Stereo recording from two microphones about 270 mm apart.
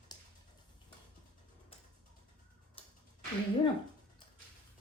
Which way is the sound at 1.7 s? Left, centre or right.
Left.